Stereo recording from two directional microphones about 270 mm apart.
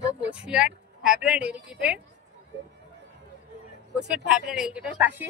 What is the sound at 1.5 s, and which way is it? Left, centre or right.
Speech, centre.